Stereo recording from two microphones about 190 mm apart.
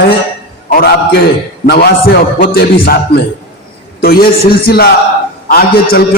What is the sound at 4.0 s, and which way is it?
A man's voice, 50° left (ahead or behind).